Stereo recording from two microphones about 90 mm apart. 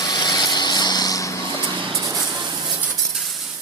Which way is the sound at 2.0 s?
35° right (ahead or behind).